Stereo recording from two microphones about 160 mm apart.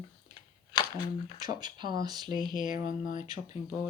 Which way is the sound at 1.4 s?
25° right (ahead or behind).